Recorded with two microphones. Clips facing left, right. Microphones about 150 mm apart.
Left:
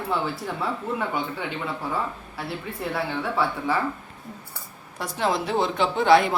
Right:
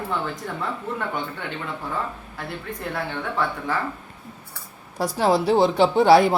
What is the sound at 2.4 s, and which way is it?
A man's voice, 5° left (ahead or behind).